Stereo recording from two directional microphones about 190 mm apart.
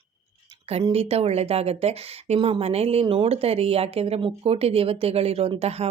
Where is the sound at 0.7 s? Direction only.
30° right (ahead or behind).